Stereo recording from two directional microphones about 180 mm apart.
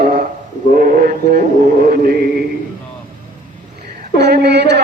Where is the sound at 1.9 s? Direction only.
55° right (ahead or behind).